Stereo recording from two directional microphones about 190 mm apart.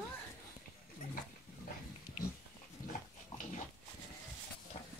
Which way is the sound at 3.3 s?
35° left (ahead or behind).